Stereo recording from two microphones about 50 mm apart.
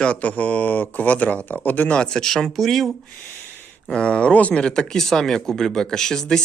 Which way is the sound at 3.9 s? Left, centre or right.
Centre.